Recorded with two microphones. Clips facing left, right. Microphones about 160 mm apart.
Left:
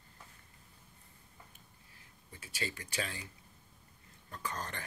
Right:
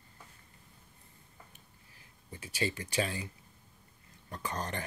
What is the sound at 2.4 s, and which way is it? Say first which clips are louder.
Speech: right 7 dB; 20° right (ahead or behind).